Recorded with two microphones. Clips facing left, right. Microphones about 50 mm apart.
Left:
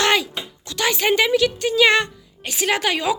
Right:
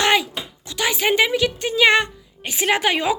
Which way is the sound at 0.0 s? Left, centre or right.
Centre.